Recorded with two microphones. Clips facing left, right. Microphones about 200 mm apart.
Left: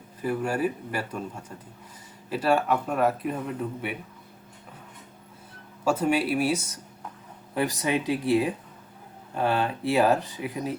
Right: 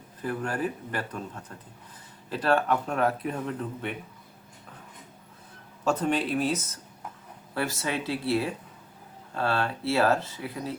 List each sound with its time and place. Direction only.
0.2 s speech: 10° left (ahead or behind)
5.8 s speech: 10° left (ahead or behind)